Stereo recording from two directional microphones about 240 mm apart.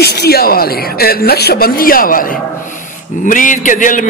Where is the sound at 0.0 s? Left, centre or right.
Left.